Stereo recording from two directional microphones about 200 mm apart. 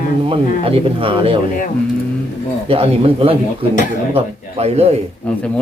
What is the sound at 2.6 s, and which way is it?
Speech, 30° right (ahead or behind).